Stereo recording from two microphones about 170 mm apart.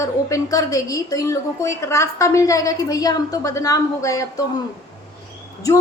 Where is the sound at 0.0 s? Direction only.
20° left (ahead or behind).